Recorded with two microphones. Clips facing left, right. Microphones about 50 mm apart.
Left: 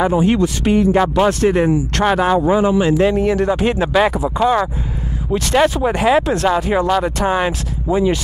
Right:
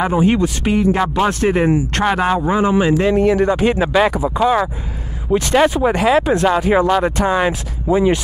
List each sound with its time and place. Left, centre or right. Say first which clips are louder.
0.0 s speech: even; centre